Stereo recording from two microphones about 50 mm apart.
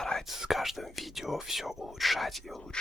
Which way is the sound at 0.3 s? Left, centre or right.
Centre.